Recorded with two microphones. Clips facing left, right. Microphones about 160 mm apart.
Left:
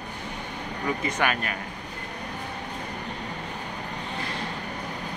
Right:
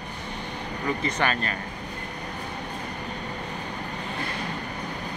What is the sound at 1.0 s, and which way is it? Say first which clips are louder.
Speech: even; 10° left (ahead or behind).